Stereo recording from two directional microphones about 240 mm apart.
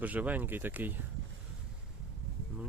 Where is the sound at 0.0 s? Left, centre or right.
Centre.